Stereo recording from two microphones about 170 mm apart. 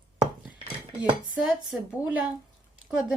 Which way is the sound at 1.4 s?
5° right (ahead or behind).